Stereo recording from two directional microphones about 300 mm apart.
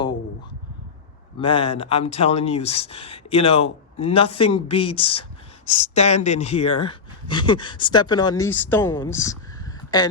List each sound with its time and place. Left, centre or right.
1.4 s speech: centre